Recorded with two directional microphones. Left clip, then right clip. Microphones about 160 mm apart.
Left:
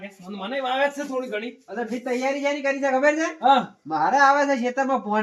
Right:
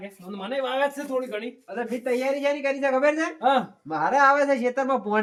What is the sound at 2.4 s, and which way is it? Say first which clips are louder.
Speech: left 1 dB; 35° right (ahead or behind).